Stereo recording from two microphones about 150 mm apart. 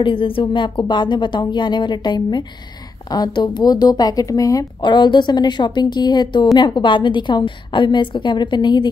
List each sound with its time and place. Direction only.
0.0 s a woman's voice: 35° left (ahead or behind)